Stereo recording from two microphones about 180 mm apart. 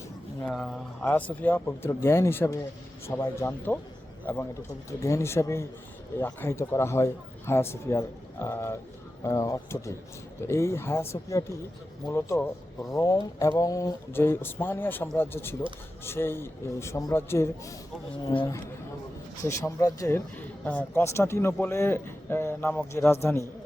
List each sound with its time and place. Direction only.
0.4 s a man's voice: centre (ahead or behind)